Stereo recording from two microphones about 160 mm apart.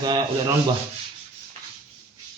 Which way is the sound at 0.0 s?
25° right (ahead or behind).